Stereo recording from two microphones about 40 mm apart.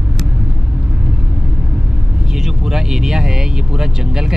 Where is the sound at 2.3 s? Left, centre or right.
Centre.